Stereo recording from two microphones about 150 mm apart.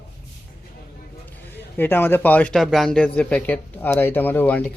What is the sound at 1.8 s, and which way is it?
Speech, 15° left (ahead or behind).